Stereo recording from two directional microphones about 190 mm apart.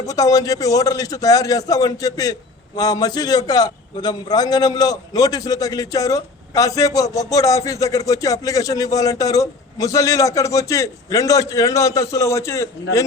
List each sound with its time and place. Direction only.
0.0 s a man's voice: 15° left (ahead or behind)